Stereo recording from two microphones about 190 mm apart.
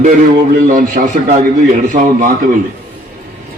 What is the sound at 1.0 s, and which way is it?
A man's voice, 40° right (ahead or behind).